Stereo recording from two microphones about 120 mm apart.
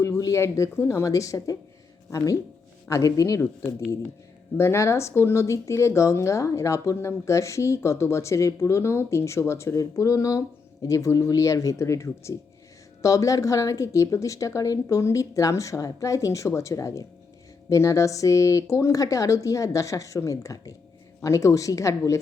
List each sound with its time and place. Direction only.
0.0 s speech: 25° left (ahead or behind)